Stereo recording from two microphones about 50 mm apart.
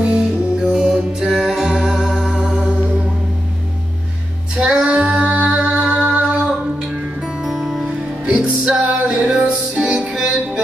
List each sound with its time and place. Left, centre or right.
0.6 s music: centre
4.6 s music: centre
5.6 s music: centre
5.9 s music: right
7.5 s music: centre
8.4 s music: right